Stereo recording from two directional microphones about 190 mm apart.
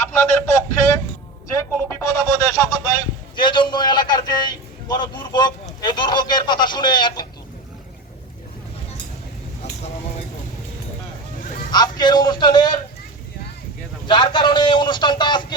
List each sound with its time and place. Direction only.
0.0 s speech: 15° left (ahead or behind)
2.0 s a sound: 15° left (ahead or behind)
11.7 s a man's voice: 20° left (ahead or behind)
14.1 s a man's voice: 25° left (ahead or behind)